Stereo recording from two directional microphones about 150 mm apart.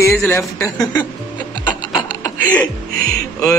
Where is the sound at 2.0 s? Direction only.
30° left (ahead or behind).